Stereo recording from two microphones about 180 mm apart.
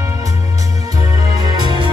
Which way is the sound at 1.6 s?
25° right (ahead or behind).